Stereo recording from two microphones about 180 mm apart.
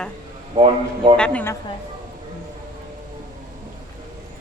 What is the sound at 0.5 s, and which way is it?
Speech, 30° right (ahead or behind).